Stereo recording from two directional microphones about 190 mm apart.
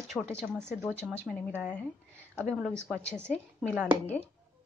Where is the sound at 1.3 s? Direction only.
5° right (ahead or behind).